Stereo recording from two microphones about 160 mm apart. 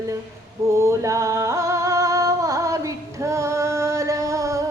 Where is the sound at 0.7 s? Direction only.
20° right (ahead or behind).